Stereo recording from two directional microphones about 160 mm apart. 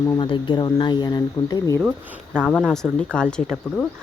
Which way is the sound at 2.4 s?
5° left (ahead or behind).